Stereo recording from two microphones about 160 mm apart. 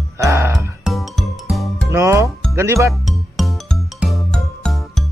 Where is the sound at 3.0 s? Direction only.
Centre (ahead or behind).